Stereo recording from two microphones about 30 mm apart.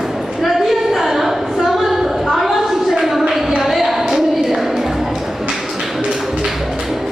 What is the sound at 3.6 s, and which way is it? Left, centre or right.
Music, centre.